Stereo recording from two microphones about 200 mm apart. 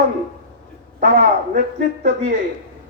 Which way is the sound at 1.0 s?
40° right (ahead or behind).